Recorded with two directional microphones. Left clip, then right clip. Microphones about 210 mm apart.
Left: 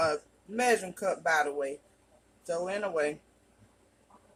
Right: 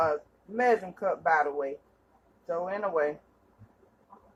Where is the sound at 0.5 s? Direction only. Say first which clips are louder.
Right 2 dB; 25° left (ahead or behind).